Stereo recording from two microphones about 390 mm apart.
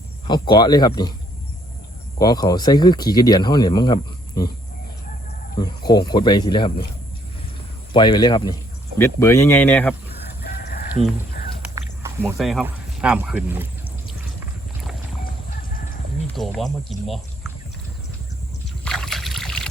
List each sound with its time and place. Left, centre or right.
0.3 s speech: centre
2.1 s speech: centre
5.6 s speech: centre
7.9 s speech: centre
10.4 s chicken: left
11.7 s speech: centre
16.2 s speech: centre
18.9 s boat: centre